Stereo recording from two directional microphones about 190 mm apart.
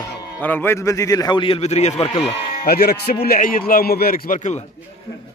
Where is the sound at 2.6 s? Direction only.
55° left (ahead or behind); by 4.6 s 40° left (ahead or behind).